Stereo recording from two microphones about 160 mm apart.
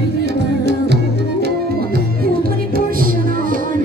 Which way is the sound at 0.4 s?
90° right.